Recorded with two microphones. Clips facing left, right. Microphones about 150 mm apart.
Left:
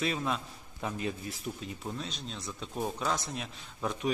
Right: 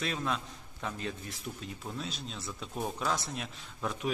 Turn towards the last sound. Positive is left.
turn(degrees=0)  # may be behind; listen again after turning